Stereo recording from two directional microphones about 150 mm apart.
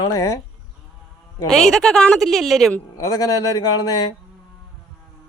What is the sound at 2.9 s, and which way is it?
Speech, 25° left (ahead or behind).